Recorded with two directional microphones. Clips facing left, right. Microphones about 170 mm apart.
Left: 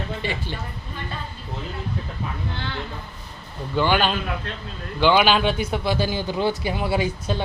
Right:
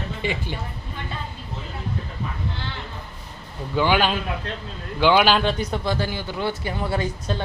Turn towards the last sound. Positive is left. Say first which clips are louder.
# left 2 dB
turn(degrees=10)  # may be behind; listen again after turning